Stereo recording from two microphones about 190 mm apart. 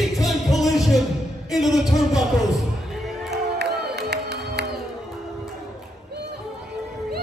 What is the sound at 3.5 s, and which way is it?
Music, 60° right (ahead or behind).